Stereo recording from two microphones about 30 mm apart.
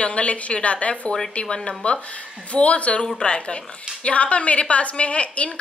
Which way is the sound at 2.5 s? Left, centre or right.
Left.